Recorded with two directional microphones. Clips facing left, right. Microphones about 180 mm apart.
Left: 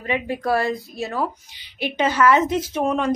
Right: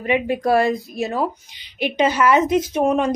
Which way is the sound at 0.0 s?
20° right (ahead or behind).